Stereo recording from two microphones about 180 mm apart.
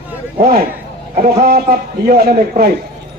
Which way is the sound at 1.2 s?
60° right (ahead or behind).